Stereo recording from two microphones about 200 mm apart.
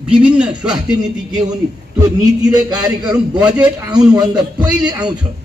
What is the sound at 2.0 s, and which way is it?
A man's voice, 20° right (ahead or behind).